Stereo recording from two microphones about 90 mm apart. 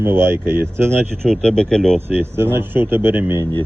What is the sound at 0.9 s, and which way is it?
Speech, 10° left (ahead or behind).